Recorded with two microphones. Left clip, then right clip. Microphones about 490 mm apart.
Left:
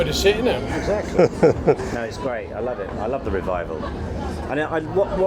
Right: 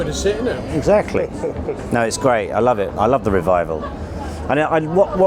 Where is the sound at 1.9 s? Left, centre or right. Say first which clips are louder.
Right 10 dB; right.